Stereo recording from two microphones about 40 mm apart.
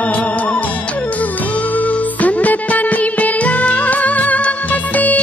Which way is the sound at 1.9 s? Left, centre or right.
Left.